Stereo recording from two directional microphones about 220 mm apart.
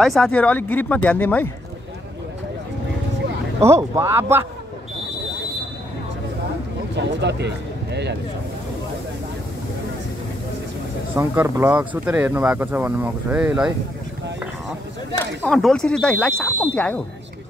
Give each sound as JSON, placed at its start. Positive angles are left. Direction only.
{"t": 0.0, "sound": "speech", "side_deg": 0}
{"t": 3.9, "sound": "speech", "side_deg": -10}
{"t": 7.0, "sound": "speech", "side_deg": -50}
{"t": 11.1, "sound": "speech", "side_deg": -15}
{"t": 15.4, "sound": "speech", "side_deg": 0}